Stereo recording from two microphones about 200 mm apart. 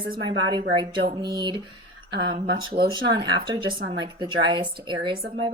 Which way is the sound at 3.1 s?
25° right (ahead or behind).